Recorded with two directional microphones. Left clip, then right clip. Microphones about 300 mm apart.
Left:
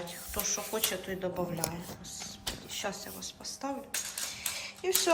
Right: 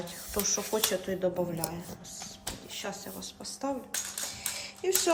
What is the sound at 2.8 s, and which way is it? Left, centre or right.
A woman's voice, centre.